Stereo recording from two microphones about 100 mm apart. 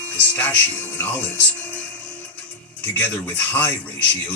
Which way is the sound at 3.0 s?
15° left (ahead or behind).